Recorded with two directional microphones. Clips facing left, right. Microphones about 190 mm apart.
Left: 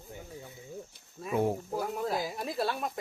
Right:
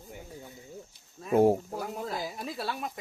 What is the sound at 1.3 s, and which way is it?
Speech, 40° right (ahead or behind).